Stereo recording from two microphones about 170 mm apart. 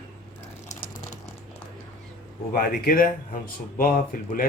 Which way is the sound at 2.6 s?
60° left (ahead or behind).